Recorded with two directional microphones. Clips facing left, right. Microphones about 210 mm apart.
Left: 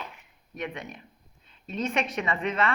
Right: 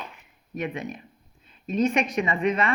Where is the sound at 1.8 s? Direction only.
15° right (ahead or behind).